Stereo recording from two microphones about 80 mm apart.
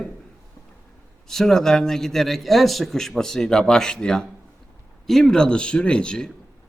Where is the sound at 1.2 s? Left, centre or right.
Centre.